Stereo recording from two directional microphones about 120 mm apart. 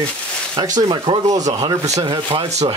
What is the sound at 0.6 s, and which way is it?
Speech, 40° right (ahead or behind).